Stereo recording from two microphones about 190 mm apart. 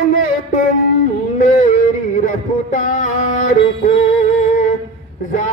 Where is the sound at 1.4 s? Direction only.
40° left (ahead or behind).